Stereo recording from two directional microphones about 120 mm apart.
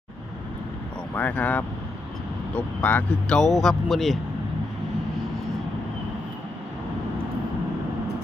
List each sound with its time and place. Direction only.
1.1 s speech: 10° left (ahead or behind)